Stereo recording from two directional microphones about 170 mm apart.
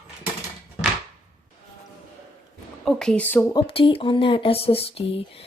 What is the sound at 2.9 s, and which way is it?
Speech, 5° left (ahead or behind).